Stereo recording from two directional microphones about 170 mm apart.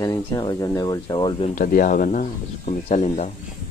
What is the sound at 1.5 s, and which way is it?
Speech, 55° left (ahead or behind).